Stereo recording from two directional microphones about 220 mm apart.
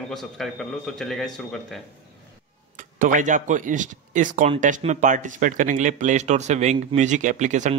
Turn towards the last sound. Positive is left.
turn(degrees=-35)  # may be behind; listen again after turning